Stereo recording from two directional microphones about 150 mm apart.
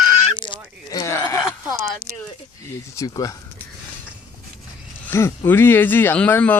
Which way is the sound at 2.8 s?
20° left (ahead or behind).